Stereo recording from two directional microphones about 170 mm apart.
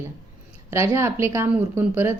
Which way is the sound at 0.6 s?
15° right (ahead or behind).